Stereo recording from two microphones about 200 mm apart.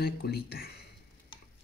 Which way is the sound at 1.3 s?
25° left (ahead or behind).